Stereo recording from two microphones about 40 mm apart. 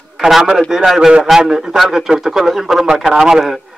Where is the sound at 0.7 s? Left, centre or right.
Centre.